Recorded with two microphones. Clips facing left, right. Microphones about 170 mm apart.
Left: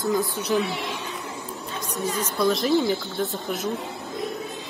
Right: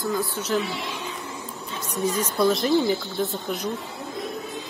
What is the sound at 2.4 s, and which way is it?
Speech, centre (ahead or behind).